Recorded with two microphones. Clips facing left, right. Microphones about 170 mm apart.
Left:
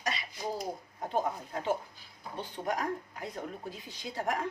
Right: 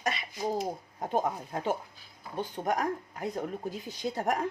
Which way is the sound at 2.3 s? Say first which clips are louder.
Right 4 dB; 45° right (ahead or behind).